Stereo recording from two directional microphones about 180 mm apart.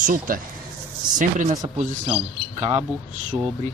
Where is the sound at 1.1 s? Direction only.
45° right (ahead or behind).